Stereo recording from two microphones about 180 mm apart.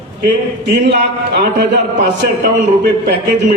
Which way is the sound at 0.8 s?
70° right (ahead or behind).